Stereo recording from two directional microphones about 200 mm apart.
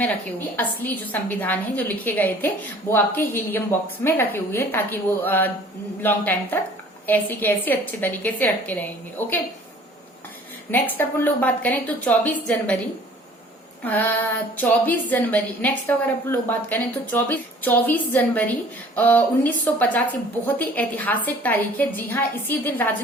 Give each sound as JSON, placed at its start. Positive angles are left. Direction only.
{"t": 0.0, "sound": "a woman's voice", "side_deg": 10}
{"t": 10.7, "sound": "a woman's voice", "side_deg": 10}
{"t": 13.8, "sound": "a woman's voice", "side_deg": 10}